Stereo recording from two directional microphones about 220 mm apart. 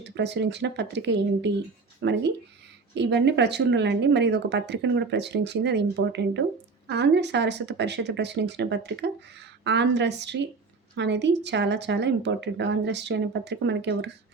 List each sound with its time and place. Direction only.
0.0 s speech: 50° right (ahead or behind)